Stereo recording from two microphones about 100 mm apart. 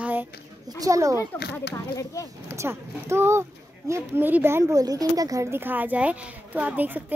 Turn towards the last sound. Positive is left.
turn(degrees=-15)  # may be behind; listen again after turning